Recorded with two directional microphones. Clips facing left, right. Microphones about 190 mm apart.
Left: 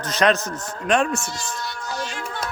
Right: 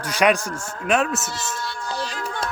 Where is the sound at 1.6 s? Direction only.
30° right (ahead or behind).